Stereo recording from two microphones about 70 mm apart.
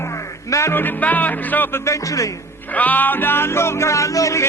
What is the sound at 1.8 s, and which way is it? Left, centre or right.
Speech, left.